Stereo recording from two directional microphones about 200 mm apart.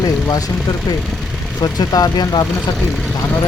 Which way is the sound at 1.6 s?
20° left (ahead or behind).